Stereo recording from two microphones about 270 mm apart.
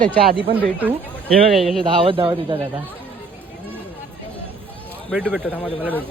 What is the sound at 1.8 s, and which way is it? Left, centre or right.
Speech, centre.